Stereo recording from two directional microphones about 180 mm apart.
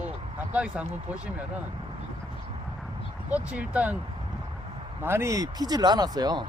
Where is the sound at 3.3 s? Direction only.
10° right (ahead or behind).